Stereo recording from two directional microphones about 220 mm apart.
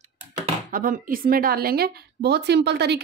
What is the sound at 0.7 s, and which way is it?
A woman's voice, 40° right (ahead or behind).